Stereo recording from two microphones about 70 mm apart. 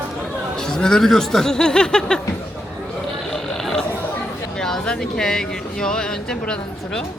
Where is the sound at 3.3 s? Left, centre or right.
Centre.